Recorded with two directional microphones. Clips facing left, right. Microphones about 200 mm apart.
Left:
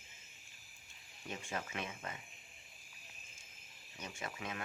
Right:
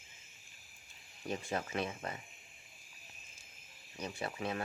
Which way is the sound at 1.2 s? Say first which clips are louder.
Right 6 dB; 35° right (ahead or behind).